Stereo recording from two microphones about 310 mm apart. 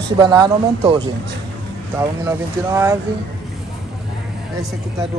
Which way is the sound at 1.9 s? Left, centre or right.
Centre.